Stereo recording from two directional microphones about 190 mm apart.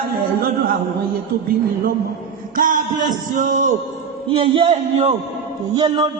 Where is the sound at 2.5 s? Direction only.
45° right (ahead or behind).